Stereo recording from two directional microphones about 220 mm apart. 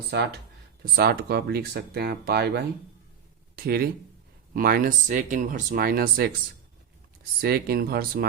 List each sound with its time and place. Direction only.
0.1 s speech: 50° right (ahead or behind)
7.4 s speech: 45° right (ahead or behind)